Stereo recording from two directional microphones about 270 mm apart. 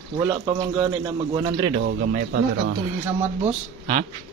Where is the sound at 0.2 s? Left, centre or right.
Centre.